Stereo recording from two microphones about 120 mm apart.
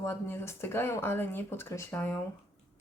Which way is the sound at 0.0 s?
20° left (ahead or behind).